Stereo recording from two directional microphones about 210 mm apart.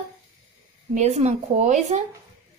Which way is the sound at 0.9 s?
30° right (ahead or behind).